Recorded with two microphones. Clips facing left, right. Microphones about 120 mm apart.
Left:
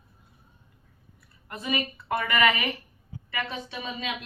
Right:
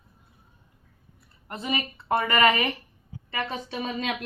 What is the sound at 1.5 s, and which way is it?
A woman's voice, 30° right (ahead or behind).